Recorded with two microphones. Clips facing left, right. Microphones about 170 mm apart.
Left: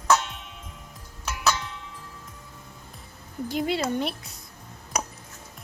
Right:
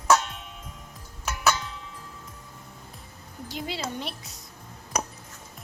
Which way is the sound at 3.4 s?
55° left (ahead or behind).